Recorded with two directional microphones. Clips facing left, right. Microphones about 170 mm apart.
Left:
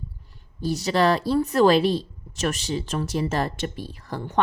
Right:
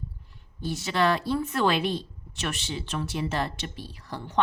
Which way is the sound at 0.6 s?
40° left (ahead or behind).